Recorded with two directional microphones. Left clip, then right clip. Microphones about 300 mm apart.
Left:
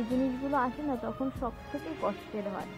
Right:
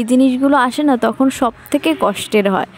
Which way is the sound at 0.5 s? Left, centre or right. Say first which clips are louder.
Right 16 dB; right.